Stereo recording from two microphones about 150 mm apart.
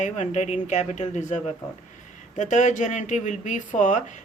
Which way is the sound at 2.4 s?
55° left (ahead or behind).